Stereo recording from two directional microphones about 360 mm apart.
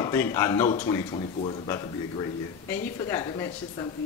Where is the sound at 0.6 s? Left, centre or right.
Centre.